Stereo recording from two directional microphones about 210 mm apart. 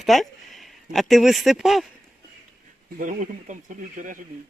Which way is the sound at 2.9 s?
40° right (ahead or behind).